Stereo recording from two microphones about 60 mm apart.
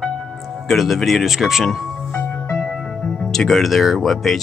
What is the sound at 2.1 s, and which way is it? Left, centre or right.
Music, left.